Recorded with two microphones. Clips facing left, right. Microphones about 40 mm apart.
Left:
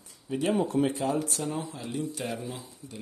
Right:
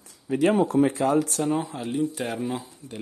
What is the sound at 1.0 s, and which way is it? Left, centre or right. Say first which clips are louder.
Speech: right 7 dB; right.